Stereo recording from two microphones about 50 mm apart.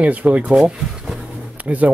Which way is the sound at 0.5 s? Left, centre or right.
Centre.